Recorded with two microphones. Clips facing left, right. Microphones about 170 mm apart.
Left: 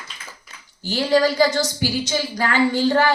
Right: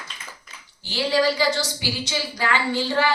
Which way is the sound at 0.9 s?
45° left (ahead or behind).